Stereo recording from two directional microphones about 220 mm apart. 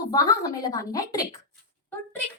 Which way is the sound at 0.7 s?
15° left (ahead or behind).